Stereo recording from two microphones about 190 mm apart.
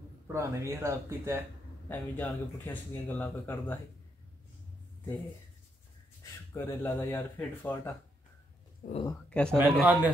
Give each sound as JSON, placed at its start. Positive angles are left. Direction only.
{"t": 0.3, "sound": "speech", "side_deg": -15}
{"t": 1.9, "sound": "speech", "side_deg": 10}
{"t": 6.5, "sound": "speech", "side_deg": 15}
{"t": 8.8, "sound": "speech", "side_deg": 50}
{"t": 9.3, "sound": "a man's voice", "side_deg": 5}
{"t": 9.6, "sound": "speech", "side_deg": -10}